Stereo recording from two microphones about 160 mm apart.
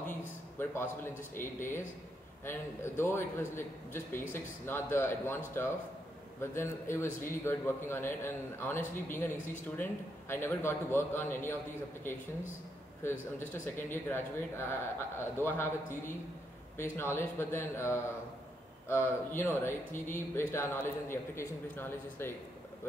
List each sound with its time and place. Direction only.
0.6 s a man's voice: 15° left (ahead or behind)
13.5 s a man's voice: 15° left (ahead or behind)